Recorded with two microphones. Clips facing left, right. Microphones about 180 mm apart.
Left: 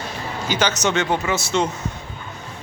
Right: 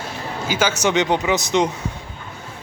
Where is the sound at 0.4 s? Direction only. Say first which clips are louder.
Right 1 dB; 10° right (ahead or behind).